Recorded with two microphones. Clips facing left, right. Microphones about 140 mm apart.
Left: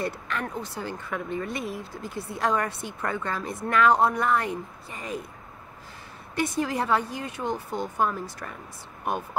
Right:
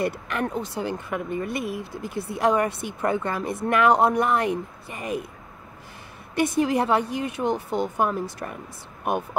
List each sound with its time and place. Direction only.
0.0 s speech: 15° right (ahead or behind)
6.3 s speech: 15° right (ahead or behind)